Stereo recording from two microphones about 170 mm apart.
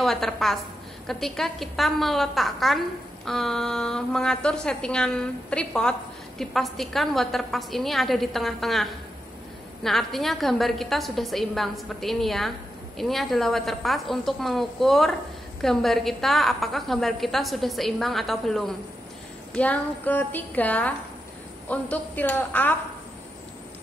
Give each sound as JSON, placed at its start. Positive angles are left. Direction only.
{"t": 0.0, "sound": "a woman's voice", "side_deg": 0}
{"t": 9.8, "sound": "a woman's voice", "side_deg": 0}